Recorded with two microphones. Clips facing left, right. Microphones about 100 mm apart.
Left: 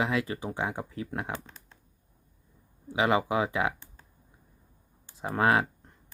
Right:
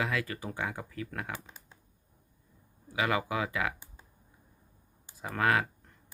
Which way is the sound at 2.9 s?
25° left (ahead or behind).